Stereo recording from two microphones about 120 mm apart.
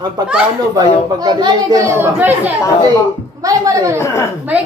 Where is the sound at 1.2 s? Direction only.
35° right (ahead or behind).